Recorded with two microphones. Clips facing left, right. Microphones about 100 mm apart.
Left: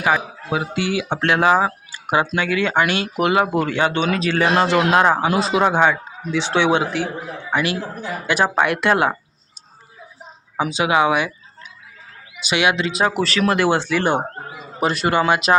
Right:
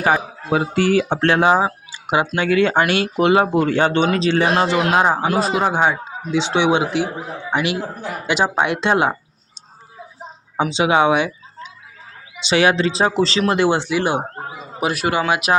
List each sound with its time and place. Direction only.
0.0 s speech: 35° right (ahead or behind)
4.6 s speech: 15° right (ahead or behind)
5.3 s speech: centre (ahead or behind)
5.7 s speech: 10° right (ahead or behind)
10.6 s speech: 25° right (ahead or behind); by 15.5 s 5° right (ahead or behind)